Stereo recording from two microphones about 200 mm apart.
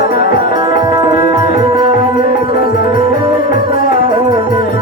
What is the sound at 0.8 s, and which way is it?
Music, 25° right (ahead or behind).